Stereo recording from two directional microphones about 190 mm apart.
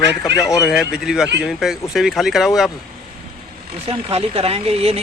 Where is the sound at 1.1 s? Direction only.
5° right (ahead or behind).